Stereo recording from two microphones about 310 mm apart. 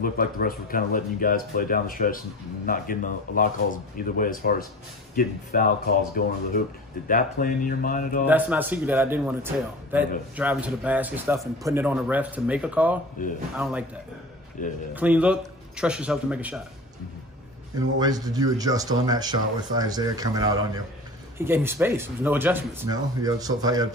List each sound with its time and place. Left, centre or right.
0.0 s speech: left
8.3 s a man's voice: centre
14.6 s speech: left
15.0 s a man's voice: centre
17.9 s speech: centre